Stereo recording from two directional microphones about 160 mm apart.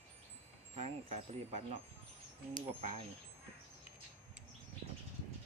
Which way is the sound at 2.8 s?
40° right (ahead or behind).